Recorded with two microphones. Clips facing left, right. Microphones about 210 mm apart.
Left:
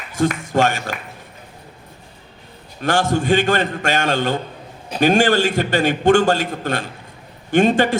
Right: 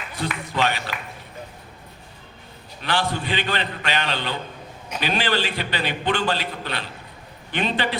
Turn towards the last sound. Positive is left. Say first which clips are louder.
# left 10 dB
turn(degrees=45)  # may be behind; listen again after turning